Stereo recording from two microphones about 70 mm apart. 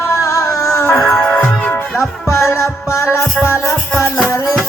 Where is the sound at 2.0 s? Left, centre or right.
Left.